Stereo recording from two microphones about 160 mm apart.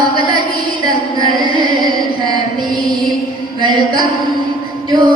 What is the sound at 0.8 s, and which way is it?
Music, 25° right (ahead or behind).